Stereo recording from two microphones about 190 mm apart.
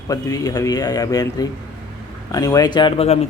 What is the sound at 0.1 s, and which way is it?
Speech, 20° left (ahead or behind).